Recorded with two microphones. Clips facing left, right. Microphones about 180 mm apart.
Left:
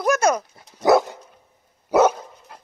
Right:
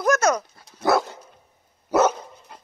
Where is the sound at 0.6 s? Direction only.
15° left (ahead or behind).